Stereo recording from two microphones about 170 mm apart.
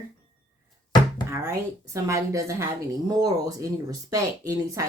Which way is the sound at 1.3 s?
20° right (ahead or behind).